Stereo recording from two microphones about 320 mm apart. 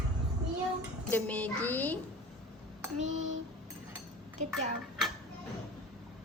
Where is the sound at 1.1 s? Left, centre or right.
Centre.